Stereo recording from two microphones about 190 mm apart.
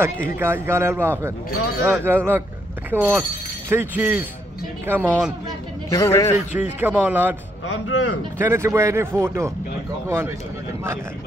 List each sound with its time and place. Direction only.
0.0 s speech: 10° right (ahead or behind)
5.9 s a man's voice: 15° left (ahead or behind)
6.3 s speech: 10° right (ahead or behind)
7.6 s speech: 90° left
8.4 s speech: 15° right (ahead or behind)